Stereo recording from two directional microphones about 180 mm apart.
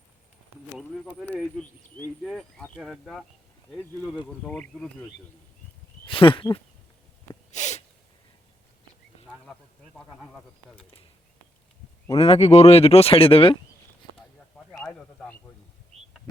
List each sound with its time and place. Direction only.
2.2 s speech: centre (ahead or behind)
6.1 s speech: 30° left (ahead or behind)
7.5 s sneeze: 40° left (ahead or behind)
9.2 s speech: 5° left (ahead or behind)
12.1 s speech: 35° left (ahead or behind)
14.7 s a sound: 5° left (ahead or behind)